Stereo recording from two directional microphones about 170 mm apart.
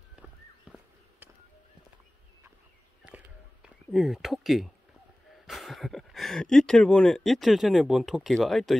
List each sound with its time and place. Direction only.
0.1 s walk: 5° right (ahead or behind)
3.6 s speech: centre (ahead or behind)